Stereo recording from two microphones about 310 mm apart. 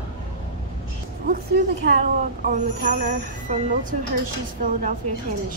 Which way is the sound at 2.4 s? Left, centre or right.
Right.